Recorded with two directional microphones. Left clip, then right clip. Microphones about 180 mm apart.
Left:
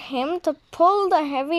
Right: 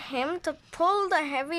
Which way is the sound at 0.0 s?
10° left (ahead or behind).